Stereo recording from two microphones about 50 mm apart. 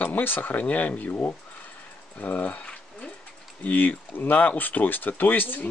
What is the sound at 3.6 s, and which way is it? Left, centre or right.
Speech, left.